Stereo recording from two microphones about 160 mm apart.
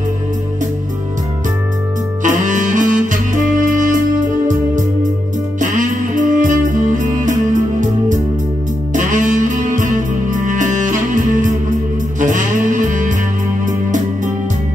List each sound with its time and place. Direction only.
2.2 s music: 50° right (ahead or behind)
5.6 s music: 50° right (ahead or behind)